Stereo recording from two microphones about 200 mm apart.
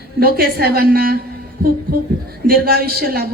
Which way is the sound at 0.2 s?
50° right (ahead or behind).